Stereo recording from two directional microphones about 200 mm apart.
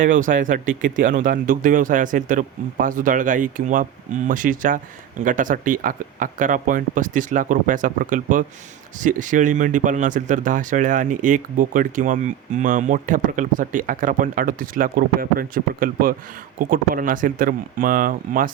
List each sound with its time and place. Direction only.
0.0 s speech: 40° right (ahead or behind)